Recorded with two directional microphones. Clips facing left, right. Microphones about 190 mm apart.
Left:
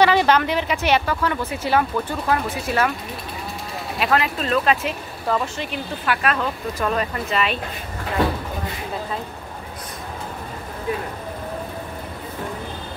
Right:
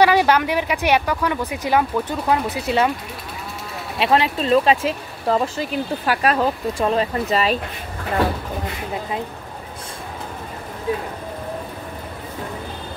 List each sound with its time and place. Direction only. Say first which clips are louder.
0.0 s speech: right 1 dB; 10° right (ahead or behind)
4.0 s speech: right 3 dB; 30° right (ahead or behind)